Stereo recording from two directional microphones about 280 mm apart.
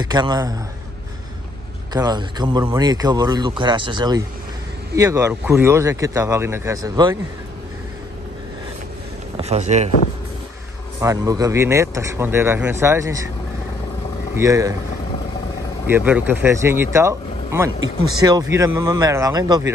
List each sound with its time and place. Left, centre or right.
0.0 s speech: centre
2.0 s speech: centre
9.4 s speech: right
11.0 s speech: centre
14.3 s speech: centre
15.9 s speech: centre